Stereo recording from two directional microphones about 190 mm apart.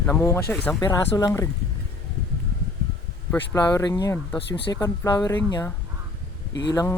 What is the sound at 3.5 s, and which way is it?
Speech, 20° left (ahead or behind).